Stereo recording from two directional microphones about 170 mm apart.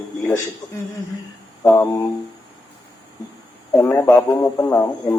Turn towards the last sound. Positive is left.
turn(degrees=20)  # may be behind; listen again after turning